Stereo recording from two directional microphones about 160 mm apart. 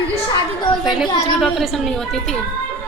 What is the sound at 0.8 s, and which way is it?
A woman's voice, centre (ahead or behind).